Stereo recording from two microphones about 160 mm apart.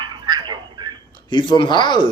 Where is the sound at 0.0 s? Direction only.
30° right (ahead or behind).